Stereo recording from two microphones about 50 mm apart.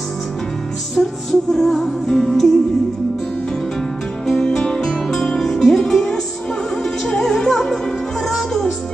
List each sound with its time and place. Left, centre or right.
1.0 s music: centre
4.4 s music: centre